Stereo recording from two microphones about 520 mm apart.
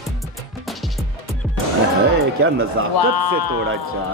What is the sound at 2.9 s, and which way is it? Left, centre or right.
Speech, left.